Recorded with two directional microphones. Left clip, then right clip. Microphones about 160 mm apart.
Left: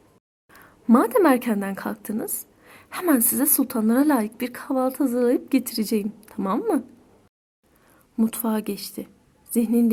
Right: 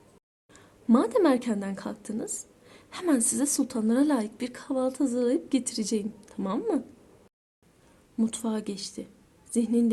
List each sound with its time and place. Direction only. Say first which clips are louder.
0.5 s a woman's voice: left 5 dB; 45° left (ahead or behind)
8.1 s a woman's voice: left 5 dB; 45° left (ahead or behind)